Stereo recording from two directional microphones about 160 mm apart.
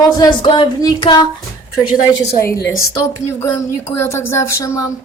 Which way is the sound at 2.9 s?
15° left (ahead or behind).